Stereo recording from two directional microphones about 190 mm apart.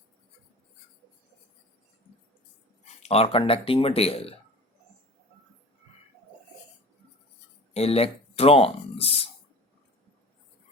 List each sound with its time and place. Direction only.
2.8 s speech: 35° left (ahead or behind)
7.7 s speech: 30° left (ahead or behind)